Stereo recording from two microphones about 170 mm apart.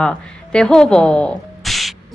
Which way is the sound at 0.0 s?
5° left (ahead or behind).